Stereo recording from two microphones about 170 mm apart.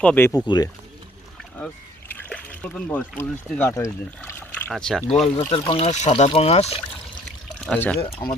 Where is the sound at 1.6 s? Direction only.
5° left (ahead or behind).